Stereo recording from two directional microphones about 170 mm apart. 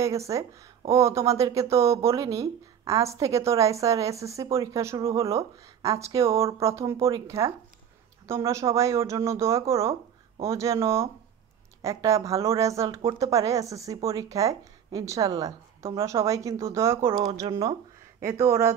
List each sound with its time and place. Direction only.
0.0 s speech: 15° right (ahead or behind)